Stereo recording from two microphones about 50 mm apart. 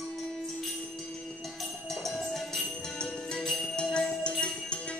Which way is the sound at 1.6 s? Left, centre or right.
Centre.